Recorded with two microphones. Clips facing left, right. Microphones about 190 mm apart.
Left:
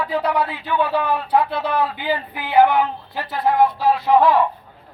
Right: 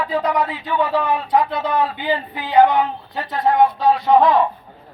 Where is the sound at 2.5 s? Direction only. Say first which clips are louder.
Right 1 dB; 5° left (ahead or behind).